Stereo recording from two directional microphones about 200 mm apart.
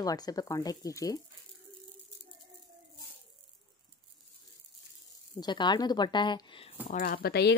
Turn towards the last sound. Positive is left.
turn(degrees=55)  # may be behind; listen again after turning